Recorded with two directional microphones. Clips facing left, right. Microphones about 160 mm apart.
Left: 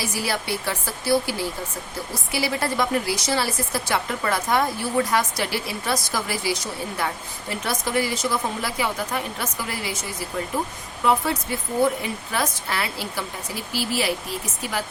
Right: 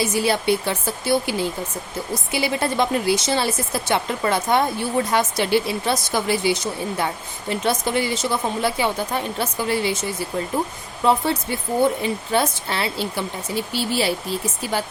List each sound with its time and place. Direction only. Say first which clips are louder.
0.0 s speech: right 7 dB; 25° right (ahead or behind)